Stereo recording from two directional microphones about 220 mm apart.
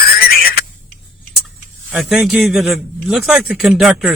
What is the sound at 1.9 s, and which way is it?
A man's voice, centre (ahead or behind).